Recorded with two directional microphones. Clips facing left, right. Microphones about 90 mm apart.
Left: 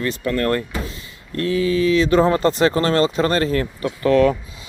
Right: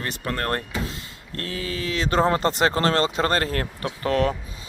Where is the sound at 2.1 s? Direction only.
35° right (ahead or behind).